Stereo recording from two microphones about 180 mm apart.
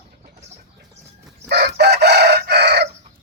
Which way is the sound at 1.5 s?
60° right (ahead or behind).